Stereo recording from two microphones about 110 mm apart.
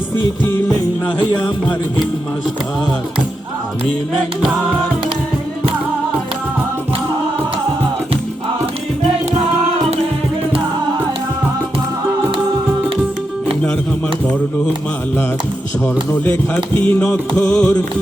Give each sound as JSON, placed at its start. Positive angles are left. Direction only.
{"t": 16.1, "sound": "music", "side_deg": 15}